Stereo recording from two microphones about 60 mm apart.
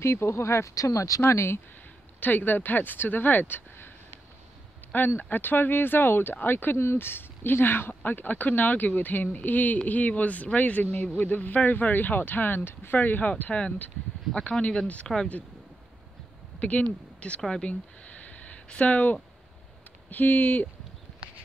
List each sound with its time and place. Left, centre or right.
0.0 s speech: left
1.3 s speech: left
2.1 s speech: left
4.9 s speech: left
16.5 s speech: left